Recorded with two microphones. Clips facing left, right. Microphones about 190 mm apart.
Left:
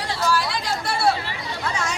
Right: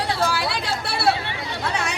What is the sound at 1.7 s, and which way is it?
Chatter, 60° right (ahead or behind).